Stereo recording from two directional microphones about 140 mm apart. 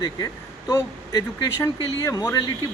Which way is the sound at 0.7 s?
20° left (ahead or behind).